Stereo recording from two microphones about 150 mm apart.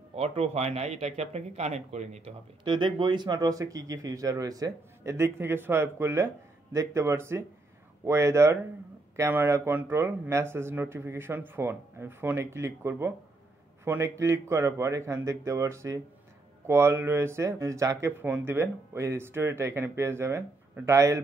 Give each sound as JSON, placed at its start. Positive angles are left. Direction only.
{"t": 0.1, "sound": "speech", "side_deg": -45}
{"t": 2.6, "sound": "speech", "side_deg": -35}